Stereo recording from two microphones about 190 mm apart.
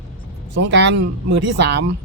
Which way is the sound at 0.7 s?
70° right (ahead or behind).